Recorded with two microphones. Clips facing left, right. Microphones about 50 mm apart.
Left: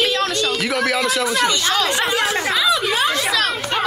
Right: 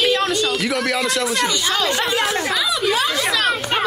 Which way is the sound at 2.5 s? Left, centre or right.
Left.